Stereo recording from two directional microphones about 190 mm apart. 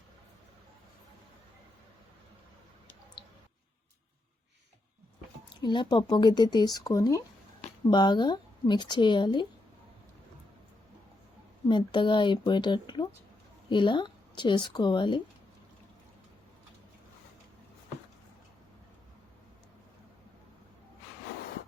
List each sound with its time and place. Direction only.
3.2 s a sound: 25° left (ahead or behind)
5.6 s speech: 25° left (ahead or behind)
11.7 s a woman's voice: 25° left (ahead or behind)